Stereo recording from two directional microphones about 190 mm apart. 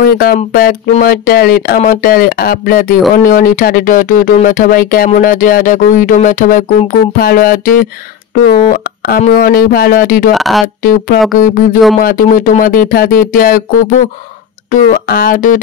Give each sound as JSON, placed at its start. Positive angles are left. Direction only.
{"t": 0.0, "sound": "speech", "side_deg": 50}
{"t": 10.3, "sound": "speech", "side_deg": 0}
{"t": 10.8, "sound": "speech", "side_deg": 50}
{"t": 14.7, "sound": "speech", "side_deg": 50}